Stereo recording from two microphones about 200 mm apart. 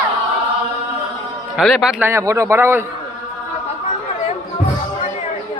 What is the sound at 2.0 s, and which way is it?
Speech, 15° right (ahead or behind).